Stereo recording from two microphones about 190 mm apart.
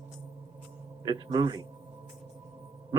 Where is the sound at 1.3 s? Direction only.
20° right (ahead or behind).